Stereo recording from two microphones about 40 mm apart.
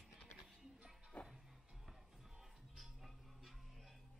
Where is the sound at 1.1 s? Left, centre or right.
Left.